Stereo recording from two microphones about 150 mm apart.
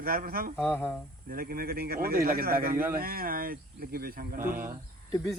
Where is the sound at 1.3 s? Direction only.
75° right (ahead or behind).